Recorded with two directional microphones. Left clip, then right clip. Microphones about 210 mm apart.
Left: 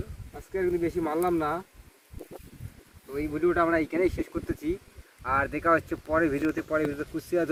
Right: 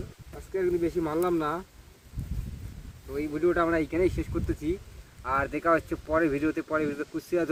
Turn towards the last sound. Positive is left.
turn(degrees=0)  # may be behind; listen again after turning